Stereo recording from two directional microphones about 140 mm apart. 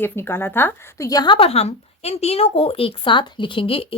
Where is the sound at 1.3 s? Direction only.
45° left (ahead or behind).